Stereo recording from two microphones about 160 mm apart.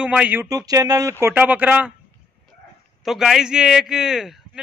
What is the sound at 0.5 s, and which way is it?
Speech, 20° right (ahead or behind).